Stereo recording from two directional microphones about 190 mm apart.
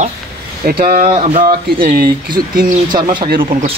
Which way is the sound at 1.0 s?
30° right (ahead or behind).